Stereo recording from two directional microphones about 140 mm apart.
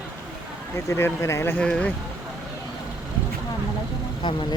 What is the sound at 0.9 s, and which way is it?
Speech, 20° left (ahead or behind).